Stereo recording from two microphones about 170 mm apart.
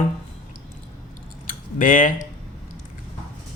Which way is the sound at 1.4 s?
55° left (ahead or behind).